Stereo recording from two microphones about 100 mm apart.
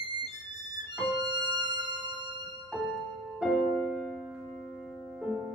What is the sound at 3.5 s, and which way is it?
Music, centre (ahead or behind).